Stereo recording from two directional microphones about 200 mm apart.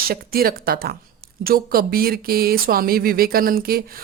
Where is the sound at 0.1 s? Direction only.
50° right (ahead or behind).